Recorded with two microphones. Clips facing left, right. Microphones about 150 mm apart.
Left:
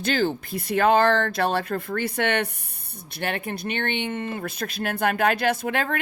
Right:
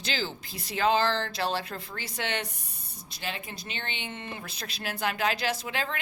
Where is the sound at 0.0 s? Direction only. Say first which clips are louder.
Left 10 dB; 55° left (ahead or behind).